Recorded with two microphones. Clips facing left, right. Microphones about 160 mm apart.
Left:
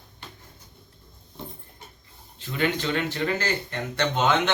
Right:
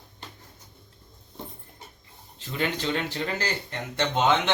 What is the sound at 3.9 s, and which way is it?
Speech, 25° right (ahead or behind).